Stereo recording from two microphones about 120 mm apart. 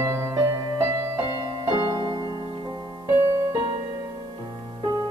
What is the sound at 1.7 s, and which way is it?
Music, 35° right (ahead or behind).